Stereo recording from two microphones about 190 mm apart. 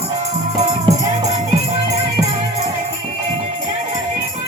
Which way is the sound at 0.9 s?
25° right (ahead or behind).